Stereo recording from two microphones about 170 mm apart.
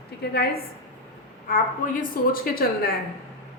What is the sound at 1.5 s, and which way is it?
A woman's voice, 50° left (ahead or behind).